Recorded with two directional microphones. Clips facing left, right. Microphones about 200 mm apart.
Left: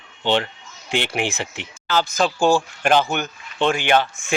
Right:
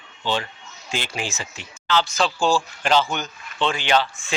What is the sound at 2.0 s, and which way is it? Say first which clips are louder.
Speech: left 4 dB; 45° left (ahead or behind).